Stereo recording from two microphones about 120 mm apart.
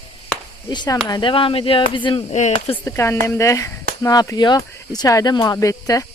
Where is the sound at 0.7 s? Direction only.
35° left (ahead or behind).